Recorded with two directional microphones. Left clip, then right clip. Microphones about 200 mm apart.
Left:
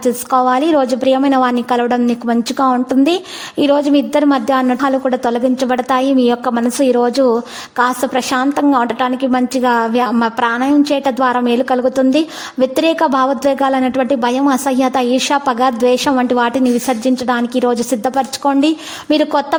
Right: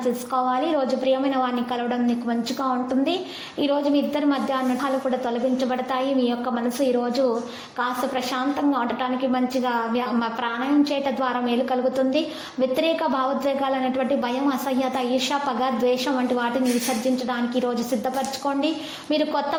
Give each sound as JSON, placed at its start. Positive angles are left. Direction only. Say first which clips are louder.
{"t": 0.3, "sound": "a woman's voice", "louder": "left 11 dB", "side_deg": 45}